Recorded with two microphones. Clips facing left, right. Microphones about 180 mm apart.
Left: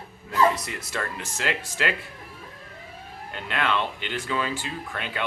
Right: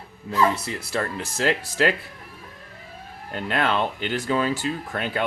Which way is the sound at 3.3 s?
40° right (ahead or behind).